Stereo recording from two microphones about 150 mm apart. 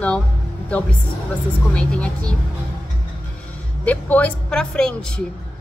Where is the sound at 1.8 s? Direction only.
5° left (ahead or behind).